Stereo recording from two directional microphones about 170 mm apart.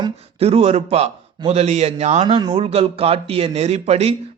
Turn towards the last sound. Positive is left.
turn(degrees=-40)  # may be behind; listen again after turning